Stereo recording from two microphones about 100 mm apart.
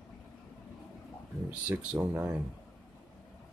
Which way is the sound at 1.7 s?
10° right (ahead or behind).